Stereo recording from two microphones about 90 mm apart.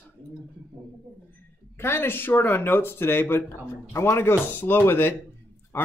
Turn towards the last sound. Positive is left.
turn(degrees=25)  # may be behind; listen again after turning